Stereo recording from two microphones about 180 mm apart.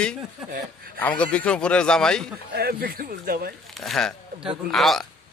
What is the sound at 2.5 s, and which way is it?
Speech, 60° right (ahead or behind).